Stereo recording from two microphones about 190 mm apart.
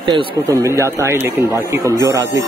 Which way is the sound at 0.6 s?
15° right (ahead or behind).